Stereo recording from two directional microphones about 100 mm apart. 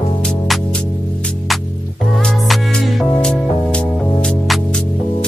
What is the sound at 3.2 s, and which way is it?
Music, 10° left (ahead or behind).